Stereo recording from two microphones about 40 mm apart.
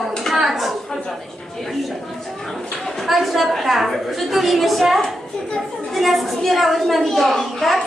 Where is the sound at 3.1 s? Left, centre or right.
Centre.